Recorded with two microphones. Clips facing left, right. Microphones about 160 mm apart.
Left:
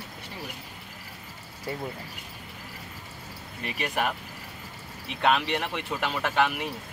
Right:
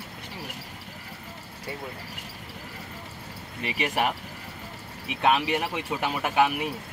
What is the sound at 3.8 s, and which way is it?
Speech, 15° right (ahead or behind).